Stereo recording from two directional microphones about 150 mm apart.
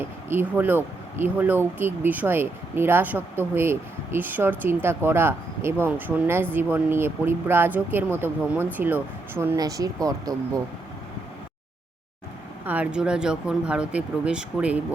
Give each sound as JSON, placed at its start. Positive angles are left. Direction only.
{"t": 0.3, "sound": "speech", "side_deg": -10}
{"t": 12.6, "sound": "speech", "side_deg": -10}